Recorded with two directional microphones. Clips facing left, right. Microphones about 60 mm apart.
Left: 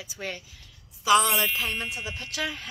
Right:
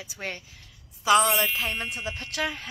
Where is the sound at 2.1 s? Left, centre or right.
Right.